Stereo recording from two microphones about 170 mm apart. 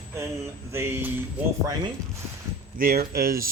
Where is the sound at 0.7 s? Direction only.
15° right (ahead or behind).